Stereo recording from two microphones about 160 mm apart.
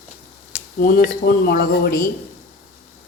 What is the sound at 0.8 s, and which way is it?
Speech, 60° left (ahead or behind).